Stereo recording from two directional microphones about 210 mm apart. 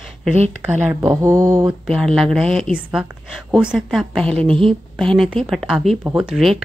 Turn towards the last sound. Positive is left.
turn(degrees=0)  # may be behind; listen again after turning